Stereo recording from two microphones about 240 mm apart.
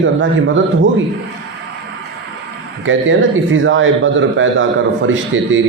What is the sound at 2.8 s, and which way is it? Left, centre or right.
Speech, right.